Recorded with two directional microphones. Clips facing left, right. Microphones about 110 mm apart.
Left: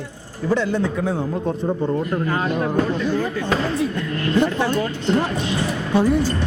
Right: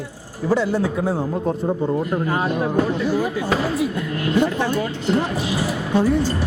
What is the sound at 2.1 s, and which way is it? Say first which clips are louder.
Speech: even; 15° right (ahead or behind).